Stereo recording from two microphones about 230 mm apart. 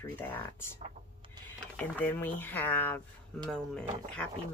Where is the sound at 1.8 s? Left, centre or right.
Centre.